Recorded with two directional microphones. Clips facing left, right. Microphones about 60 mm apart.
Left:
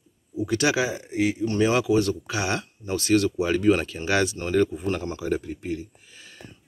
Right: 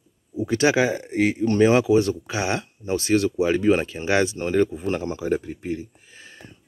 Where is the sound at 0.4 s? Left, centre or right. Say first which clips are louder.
Right 3 dB; right.